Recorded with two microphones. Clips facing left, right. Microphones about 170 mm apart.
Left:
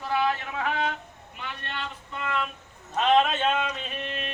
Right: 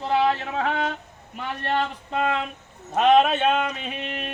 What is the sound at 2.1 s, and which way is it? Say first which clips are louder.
Speech: right 9 dB; 75° right (ahead or behind).